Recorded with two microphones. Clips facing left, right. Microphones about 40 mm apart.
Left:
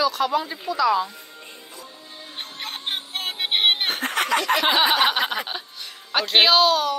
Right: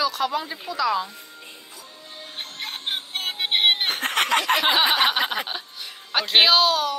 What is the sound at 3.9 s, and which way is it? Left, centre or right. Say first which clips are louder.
Snicker: right 1 dB; right.